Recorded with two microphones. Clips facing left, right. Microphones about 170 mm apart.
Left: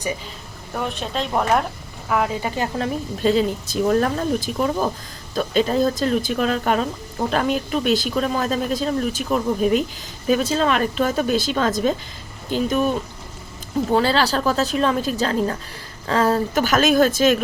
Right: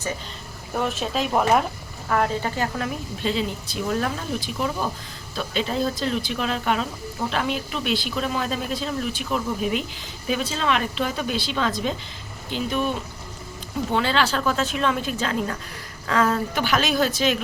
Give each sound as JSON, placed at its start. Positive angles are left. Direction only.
{"t": 0.7, "sound": "speech", "side_deg": 0}
{"t": 2.6, "sound": "a woman's voice", "side_deg": 30}
{"t": 3.2, "sound": "a woman's voice", "side_deg": 45}
{"t": 13.9, "sound": "a woman's voice", "side_deg": 35}